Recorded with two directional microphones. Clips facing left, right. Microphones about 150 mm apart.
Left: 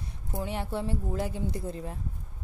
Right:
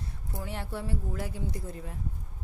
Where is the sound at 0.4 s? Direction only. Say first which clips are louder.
Left 5 dB; 20° left (ahead or behind).